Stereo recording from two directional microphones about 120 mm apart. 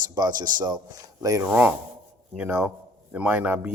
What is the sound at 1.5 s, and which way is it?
Speech, 15° right (ahead or behind).